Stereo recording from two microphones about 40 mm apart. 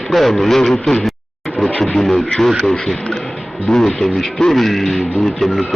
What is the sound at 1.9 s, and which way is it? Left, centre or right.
Speech, centre.